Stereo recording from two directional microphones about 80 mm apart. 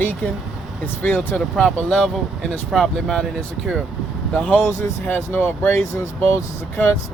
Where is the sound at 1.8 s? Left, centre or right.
Centre.